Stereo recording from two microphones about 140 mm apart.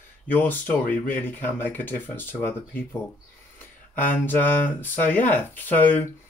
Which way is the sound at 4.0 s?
15° left (ahead or behind).